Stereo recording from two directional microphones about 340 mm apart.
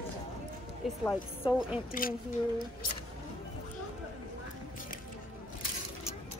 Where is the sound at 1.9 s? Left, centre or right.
Left.